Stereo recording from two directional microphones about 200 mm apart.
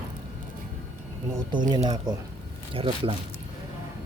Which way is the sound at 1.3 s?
20° right (ahead or behind).